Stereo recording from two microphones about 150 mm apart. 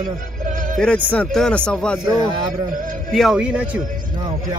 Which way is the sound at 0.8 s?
5° left (ahead or behind).